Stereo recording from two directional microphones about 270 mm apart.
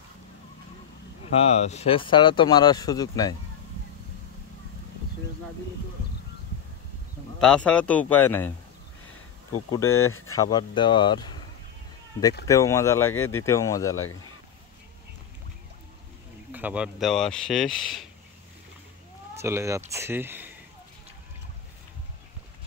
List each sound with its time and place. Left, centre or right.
1.4 s speech: left
7.3 s speech: centre
9.7 s speech: centre
12.4 s speech: centre
16.5 s speech: centre
19.3 s speech: centre